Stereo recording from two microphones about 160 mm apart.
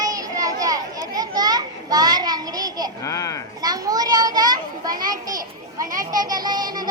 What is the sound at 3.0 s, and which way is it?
Speech, 20° left (ahead or behind).